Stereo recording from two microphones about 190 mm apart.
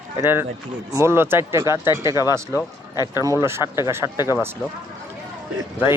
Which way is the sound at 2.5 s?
20° left (ahead or behind).